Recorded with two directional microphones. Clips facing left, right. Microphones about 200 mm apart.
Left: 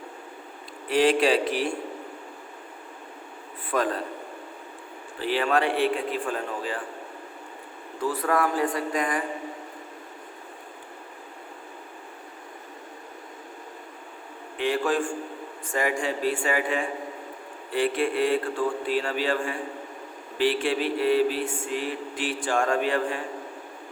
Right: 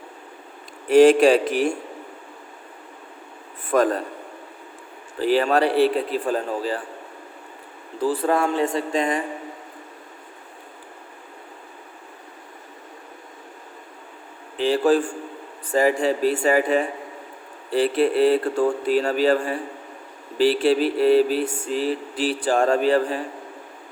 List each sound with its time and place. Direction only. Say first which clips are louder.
0.9 s speech: right 8 dB; 45° right (ahead or behind)
3.7 s speech: right 7 dB; 45° right (ahead or behind)
5.2 s a man's voice: right 5 dB; 40° right (ahead or behind)
8.0 s speech: right 4 dB; 30° right (ahead or behind)
14.6 s a man's voice: right 6 dB; 35° right (ahead or behind)